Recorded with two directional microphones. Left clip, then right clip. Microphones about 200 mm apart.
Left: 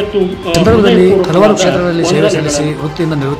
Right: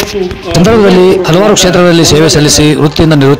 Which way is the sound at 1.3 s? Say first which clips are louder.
Right 3 dB; 40° right (ahead or behind).